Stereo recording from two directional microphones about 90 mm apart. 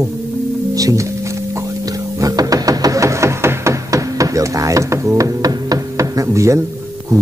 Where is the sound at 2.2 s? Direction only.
40° right (ahead or behind).